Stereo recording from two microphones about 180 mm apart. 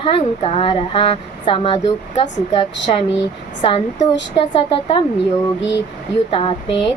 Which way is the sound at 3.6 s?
30° left (ahead or behind).